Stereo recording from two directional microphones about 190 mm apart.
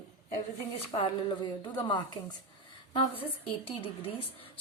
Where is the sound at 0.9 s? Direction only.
25° left (ahead or behind).